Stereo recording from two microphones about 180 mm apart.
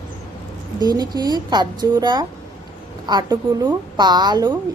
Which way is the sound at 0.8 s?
20° right (ahead or behind).